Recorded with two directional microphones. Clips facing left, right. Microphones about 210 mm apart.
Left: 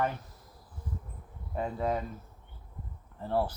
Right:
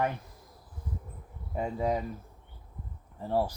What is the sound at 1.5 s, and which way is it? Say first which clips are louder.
Speech: right 1 dB; 10° right (ahead or behind).